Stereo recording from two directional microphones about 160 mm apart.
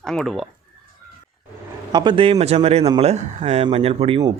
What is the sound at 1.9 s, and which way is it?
A man's voice, 30° right (ahead or behind).